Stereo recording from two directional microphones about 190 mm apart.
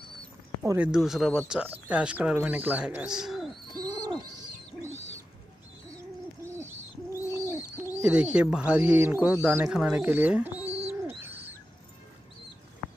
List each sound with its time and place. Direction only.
0.6 s speech: 10° right (ahead or behind)
3.7 s owl: 20° right (ahead or behind)
6.4 s hoot: 15° right (ahead or behind)
7.2 s bird: 15° left (ahead or behind)
7.7 s speech: 10° right (ahead or behind)
10.9 s bird: 10° right (ahead or behind)